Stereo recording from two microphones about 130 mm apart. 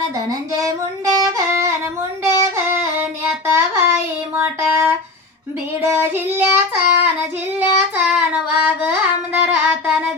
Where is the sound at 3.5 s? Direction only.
20° right (ahead or behind).